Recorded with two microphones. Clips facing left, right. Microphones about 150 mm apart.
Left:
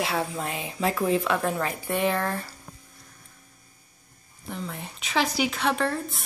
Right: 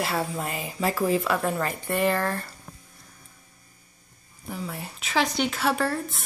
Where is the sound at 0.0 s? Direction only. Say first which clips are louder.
Even; centre (ahead or behind).